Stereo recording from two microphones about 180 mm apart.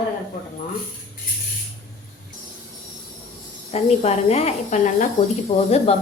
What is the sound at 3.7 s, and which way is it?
A woman's voice, 35° left (ahead or behind).